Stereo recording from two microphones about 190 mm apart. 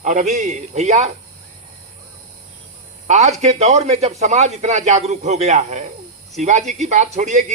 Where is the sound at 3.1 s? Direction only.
35° right (ahead or behind).